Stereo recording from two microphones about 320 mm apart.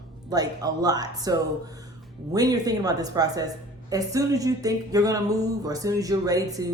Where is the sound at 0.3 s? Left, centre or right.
Centre.